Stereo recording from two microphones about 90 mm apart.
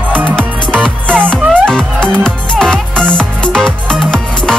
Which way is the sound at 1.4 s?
15° right (ahead or behind).